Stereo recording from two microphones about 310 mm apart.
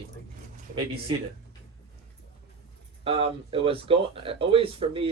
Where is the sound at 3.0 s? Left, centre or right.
Centre.